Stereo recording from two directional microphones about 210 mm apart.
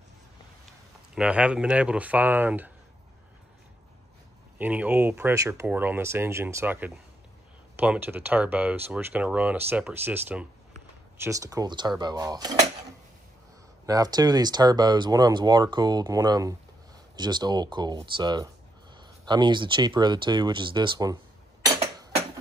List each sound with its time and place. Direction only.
1.1 s speech: 5° right (ahead or behind)
4.6 s speech: 10° right (ahead or behind)
13.8 s speech: 20° right (ahead or behind)